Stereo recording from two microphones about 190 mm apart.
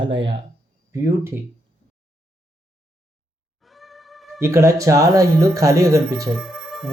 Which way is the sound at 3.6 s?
Centre (ahead or behind).